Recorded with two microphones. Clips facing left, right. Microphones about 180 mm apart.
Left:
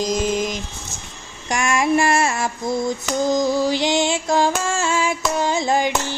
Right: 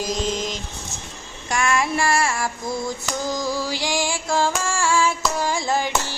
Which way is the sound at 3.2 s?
20° left (ahead or behind).